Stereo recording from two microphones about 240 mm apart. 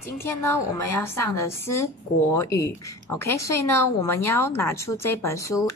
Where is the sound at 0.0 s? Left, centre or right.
Centre.